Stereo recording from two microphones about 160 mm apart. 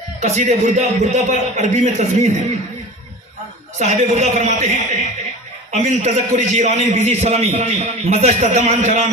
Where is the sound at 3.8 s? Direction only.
40° right (ahead or behind).